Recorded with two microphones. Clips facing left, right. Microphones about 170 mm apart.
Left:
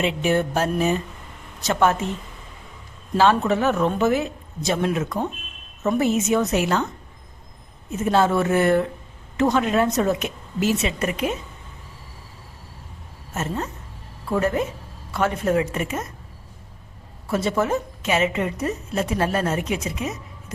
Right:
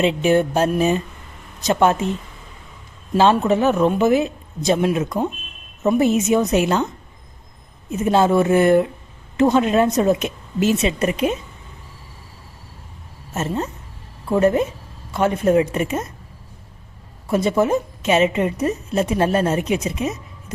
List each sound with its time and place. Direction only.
0.0 s a woman's voice: 20° right (ahead or behind)
3.2 s a woman's voice: 20° right (ahead or behind)
13.3 s a woman's voice: 20° right (ahead or behind)
17.2 s a woman's voice: 15° right (ahead or behind)